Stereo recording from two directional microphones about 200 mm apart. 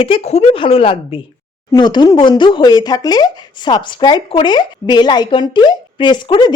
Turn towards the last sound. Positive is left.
turn(degrees=20)  # may be behind; listen again after turning